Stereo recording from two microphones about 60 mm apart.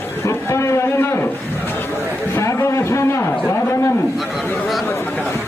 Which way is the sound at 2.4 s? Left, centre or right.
Left.